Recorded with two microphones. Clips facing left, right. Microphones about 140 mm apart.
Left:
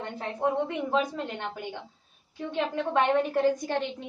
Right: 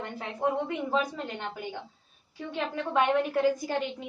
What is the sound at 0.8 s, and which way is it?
Speech, 15° left (ahead or behind).